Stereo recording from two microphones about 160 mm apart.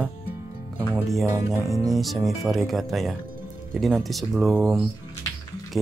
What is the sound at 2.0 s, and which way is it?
Speech, centre (ahead or behind).